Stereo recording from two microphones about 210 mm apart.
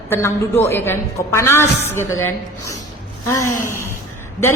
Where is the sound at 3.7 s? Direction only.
10° left (ahead or behind).